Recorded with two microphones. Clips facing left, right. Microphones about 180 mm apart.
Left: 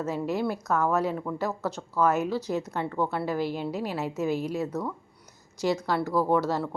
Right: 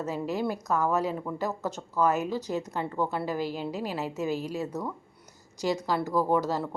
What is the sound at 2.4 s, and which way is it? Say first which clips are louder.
Speech: left 2 dB; 40° right (ahead or behind).